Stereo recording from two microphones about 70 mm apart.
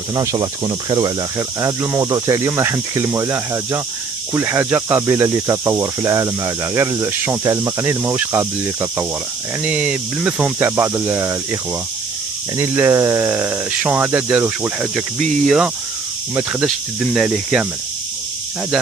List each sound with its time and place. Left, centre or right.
0.1 s speech: right
0.4 s speech: right
2.0 s speech: right
9.6 s speech: centre
10.6 s speech: right
12.5 s speech: right
13.3 s speech: right
15.1 s speech: centre
17.1 s speech: centre